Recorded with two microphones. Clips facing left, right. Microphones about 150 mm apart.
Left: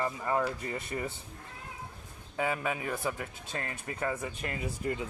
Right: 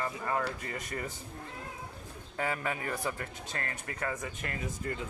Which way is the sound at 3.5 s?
20° left (ahead or behind).